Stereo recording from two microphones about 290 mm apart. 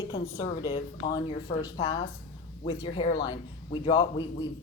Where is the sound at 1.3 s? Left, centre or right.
Left.